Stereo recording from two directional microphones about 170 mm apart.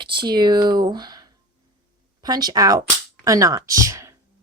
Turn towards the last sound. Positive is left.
turn(degrees=-15)  # may be behind; listen again after turning